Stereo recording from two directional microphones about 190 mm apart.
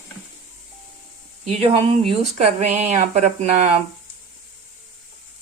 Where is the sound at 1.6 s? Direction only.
30° right (ahead or behind).